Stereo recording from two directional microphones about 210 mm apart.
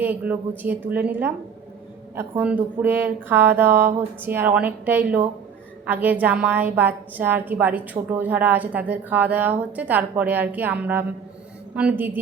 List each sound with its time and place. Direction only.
0.0 s a woman's voice: 10° right (ahead or behind)